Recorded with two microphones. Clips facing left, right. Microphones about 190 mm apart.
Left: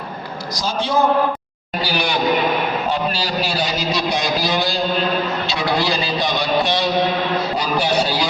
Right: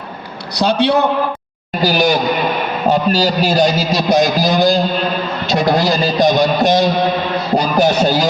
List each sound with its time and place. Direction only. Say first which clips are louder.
0.5 s a man's voice: right 7 dB; 65° right (ahead or behind)
1.8 s a man's voice: right 6 dB; 40° right (ahead or behind)